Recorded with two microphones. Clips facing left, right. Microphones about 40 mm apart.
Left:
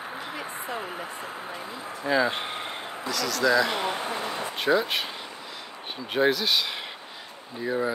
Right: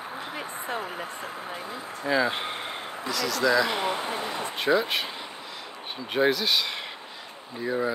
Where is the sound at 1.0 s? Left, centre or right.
Left.